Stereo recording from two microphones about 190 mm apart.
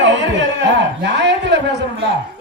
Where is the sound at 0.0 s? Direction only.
75° right (ahead or behind).